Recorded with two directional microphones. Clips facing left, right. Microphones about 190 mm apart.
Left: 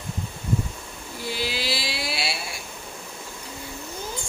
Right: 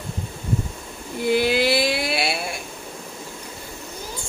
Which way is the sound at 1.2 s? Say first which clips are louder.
Right 11 dB; 55° right (ahead or behind).